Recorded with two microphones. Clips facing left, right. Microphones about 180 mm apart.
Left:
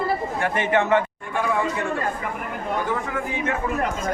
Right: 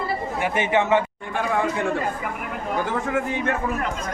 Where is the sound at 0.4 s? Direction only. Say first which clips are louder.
Even; 10° right (ahead or behind).